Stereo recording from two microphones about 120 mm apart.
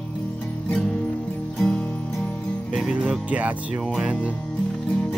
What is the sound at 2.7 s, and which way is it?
Speech, 5° right (ahead or behind).